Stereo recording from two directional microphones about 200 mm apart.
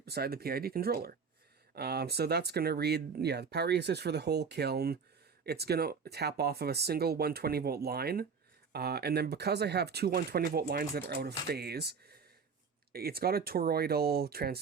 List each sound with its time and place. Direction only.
0.0 s speech: 50° right (ahead or behind)